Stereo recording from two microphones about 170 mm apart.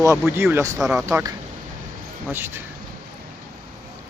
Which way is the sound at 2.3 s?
15° right (ahead or behind).